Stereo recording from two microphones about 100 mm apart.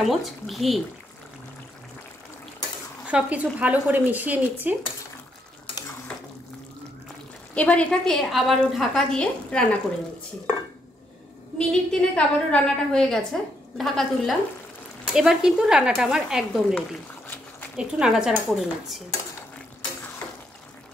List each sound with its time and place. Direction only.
0.0 s speech: centre (ahead or behind)
3.1 s a woman's voice: 15° right (ahead or behind)
6.1 s water: 15° left (ahead or behind)
7.5 s a woman's voice: 10° left (ahead or behind)
11.5 s a woman's voice: 10° left (ahead or behind)
17.7 s speech: 5° right (ahead or behind)